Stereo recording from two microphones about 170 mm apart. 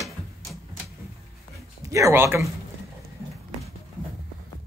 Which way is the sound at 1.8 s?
20° right (ahead or behind).